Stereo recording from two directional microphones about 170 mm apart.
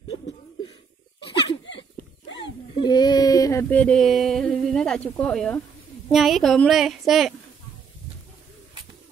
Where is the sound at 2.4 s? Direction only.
25° left (ahead or behind).